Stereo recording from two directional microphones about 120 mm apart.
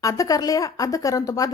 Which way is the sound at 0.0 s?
30° left (ahead or behind).